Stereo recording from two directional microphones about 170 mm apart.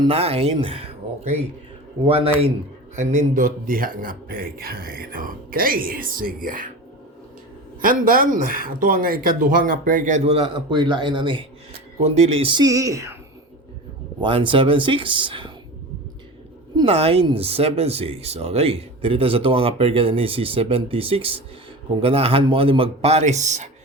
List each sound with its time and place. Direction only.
0.0 s a man's voice: 35° right (ahead or behind); by 6.7 s 55° right (ahead or behind)
7.8 s a man's voice: 55° right (ahead or behind); by 11.4 s 30° right (ahead or behind)
11.9 s speech: 40° right (ahead or behind); by 13.1 s 20° right (ahead or behind)
14.2 s speech: 30° right (ahead or behind)
16.7 s speech: 35° right (ahead or behind)